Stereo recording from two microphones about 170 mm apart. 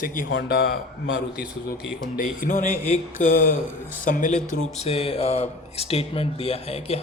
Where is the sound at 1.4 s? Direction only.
5° right (ahead or behind).